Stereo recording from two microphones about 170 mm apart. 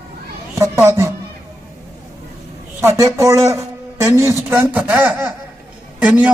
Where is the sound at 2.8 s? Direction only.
15° right (ahead or behind).